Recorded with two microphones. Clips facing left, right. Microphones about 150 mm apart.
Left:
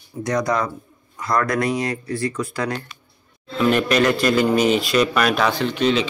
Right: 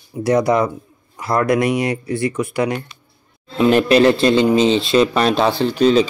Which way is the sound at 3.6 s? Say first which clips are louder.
Right 5 dB; 30° right (ahead or behind).